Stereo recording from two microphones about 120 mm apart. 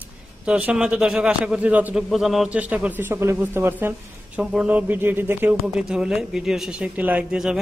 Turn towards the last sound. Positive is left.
turn(degrees=-5)  # may be behind; listen again after turning